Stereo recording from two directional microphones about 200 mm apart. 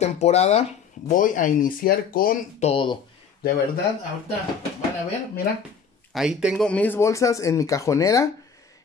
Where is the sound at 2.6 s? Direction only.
25° left (ahead or behind).